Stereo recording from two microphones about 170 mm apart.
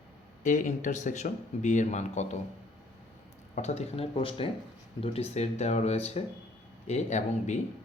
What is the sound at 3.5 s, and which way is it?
Speech, 40° left (ahead or behind).